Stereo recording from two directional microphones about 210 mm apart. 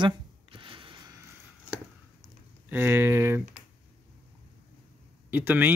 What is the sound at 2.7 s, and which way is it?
Speech, 10° right (ahead or behind).